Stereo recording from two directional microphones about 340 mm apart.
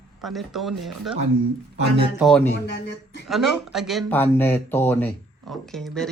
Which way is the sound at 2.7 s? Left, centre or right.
Left.